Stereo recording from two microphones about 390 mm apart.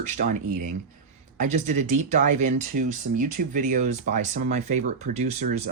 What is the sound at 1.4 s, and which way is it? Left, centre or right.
Speech, centre.